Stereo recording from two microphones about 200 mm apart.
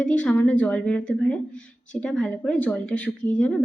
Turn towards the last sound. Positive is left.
turn(degrees=5)  # may be behind; listen again after turning